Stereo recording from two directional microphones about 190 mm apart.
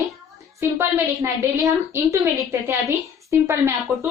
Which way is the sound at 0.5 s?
15° right (ahead or behind).